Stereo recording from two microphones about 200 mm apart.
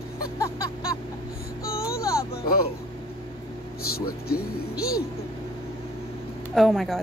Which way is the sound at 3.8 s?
50° left (ahead or behind).